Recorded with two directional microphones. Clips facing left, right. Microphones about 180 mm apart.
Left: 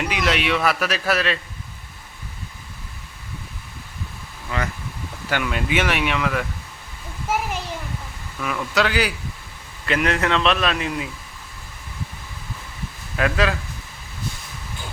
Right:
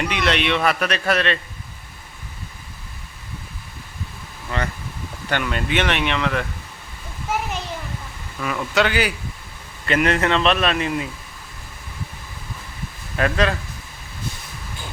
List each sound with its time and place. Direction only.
0.0 s a man's voice: 5° left (ahead or behind)
4.5 s a man's voice: 5° left (ahead or behind)
8.4 s a man's voice: centre (ahead or behind)
13.1 s a man's voice: 5° left (ahead or behind)